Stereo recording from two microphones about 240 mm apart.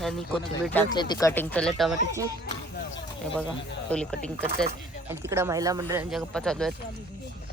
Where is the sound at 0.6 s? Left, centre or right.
Centre.